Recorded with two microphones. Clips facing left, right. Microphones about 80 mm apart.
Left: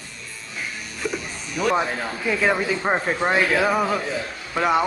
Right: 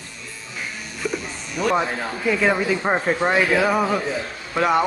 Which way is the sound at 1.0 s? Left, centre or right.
Centre.